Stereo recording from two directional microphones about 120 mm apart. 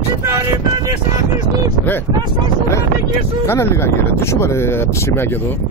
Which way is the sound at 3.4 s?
20° left (ahead or behind).